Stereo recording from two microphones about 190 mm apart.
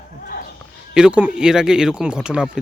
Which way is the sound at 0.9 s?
5° right (ahead or behind).